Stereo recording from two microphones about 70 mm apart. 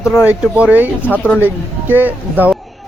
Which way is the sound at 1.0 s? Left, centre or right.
Left.